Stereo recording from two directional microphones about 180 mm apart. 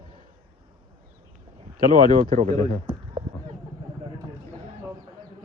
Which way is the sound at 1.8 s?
50° right (ahead or behind).